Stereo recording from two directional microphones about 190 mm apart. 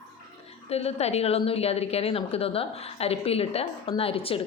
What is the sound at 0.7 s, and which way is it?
Speech, 35° left (ahead or behind).